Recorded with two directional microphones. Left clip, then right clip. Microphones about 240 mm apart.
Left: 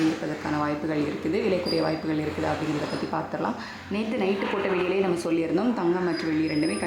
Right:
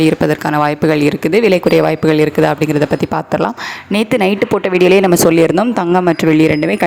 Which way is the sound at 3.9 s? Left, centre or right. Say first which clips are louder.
Right 14 dB; right.